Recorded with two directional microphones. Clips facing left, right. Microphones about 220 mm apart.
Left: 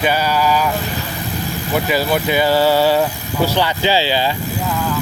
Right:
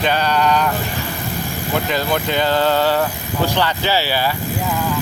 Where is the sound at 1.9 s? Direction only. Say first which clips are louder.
Left 4 dB; 10° left (ahead or behind).